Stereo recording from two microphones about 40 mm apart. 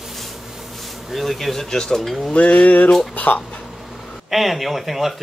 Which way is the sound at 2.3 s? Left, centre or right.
Left.